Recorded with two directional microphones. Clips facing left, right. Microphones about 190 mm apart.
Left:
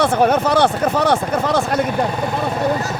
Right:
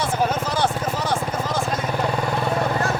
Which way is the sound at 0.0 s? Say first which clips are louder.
Left 8 dB; 65° left (ahead or behind).